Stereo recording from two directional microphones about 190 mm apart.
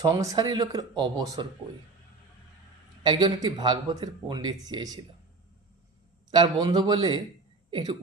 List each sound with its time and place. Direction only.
0.0 s speech: 15° right (ahead or behind)
3.0 s speech: 25° right (ahead or behind)
6.3 s speech: 20° right (ahead or behind)